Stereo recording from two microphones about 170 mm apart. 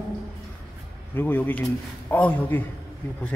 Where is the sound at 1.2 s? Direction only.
10° left (ahead or behind).